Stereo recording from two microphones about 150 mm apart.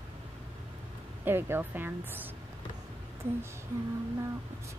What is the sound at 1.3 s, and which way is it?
Speech, 15° right (ahead or behind).